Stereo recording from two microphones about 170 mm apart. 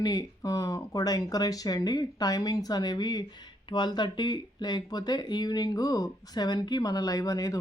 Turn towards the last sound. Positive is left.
turn(degrees=20)  # may be behind; listen again after turning